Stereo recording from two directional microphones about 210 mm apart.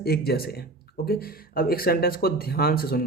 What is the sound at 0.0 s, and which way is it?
Speech, 50° left (ahead or behind).